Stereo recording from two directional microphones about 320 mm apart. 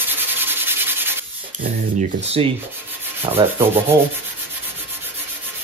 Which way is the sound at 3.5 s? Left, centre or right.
Centre.